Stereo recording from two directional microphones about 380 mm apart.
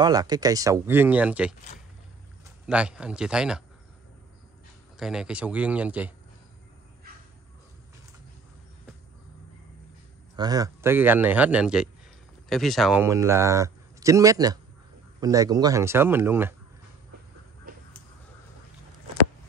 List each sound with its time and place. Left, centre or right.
0.0 s speech: centre
2.6 s a man's voice: centre
4.9 s a man's voice: centre
10.3 s a man's voice: centre
17.7 s a sound: right